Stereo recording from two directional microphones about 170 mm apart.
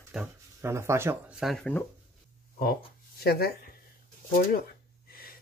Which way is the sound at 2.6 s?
65° left (ahead or behind).